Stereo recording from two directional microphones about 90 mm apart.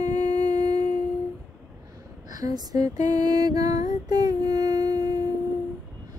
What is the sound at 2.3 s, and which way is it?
Lullaby, 45° right (ahead or behind).